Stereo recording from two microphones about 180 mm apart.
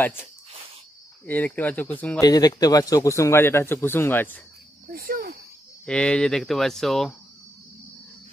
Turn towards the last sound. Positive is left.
turn(degrees=0)  # may be behind; listen again after turning